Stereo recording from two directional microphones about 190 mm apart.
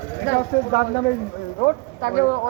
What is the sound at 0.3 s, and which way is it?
Speech, 75° left (ahead or behind).